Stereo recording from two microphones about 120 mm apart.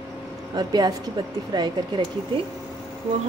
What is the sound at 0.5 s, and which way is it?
Speech, 35° right (ahead or behind).